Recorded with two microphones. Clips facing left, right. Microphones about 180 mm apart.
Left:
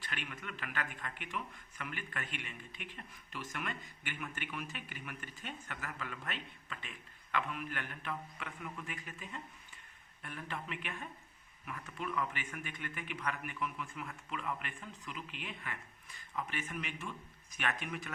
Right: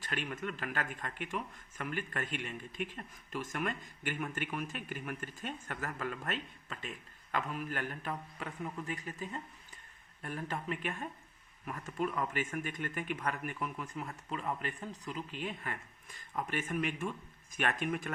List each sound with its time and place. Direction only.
0.0 s speech: 40° right (ahead or behind)